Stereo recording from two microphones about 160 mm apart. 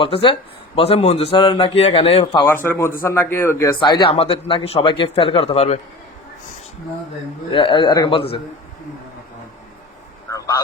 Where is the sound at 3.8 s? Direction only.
30° left (ahead or behind).